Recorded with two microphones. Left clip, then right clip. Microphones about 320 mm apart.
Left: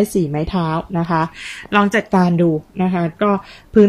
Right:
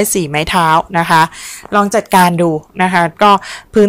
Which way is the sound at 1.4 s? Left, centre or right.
Centre.